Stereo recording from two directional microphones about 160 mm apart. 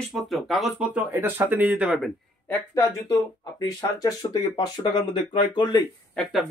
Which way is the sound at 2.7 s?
20° left (ahead or behind).